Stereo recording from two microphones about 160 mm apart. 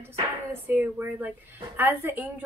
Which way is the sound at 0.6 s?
10° right (ahead or behind).